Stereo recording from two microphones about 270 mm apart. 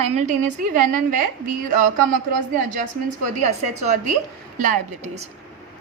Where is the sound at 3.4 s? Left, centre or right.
Right.